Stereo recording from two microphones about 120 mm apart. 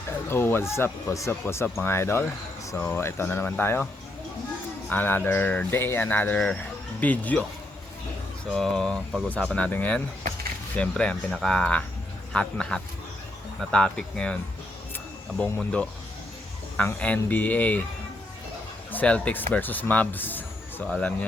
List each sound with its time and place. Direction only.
0.3 s speech: 20° left (ahead or behind)
4.9 s speech: 15° left (ahead or behind)
8.5 s speech: 5° left (ahead or behind)
15.5 s speech: 10° left (ahead or behind)
18.9 s speech: 10° left (ahead or behind)